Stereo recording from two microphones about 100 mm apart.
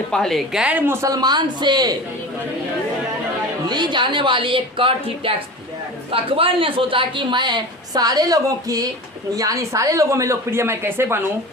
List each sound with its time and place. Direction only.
0.1 s a woman's voice: 5° left (ahead or behind); by 0.9 s 15° right (ahead or behind)
1.0 s speech: 40° right (ahead or behind)
3.7 s a woman's voice: 50° right (ahead or behind); by 11.2 s 25° right (ahead or behind)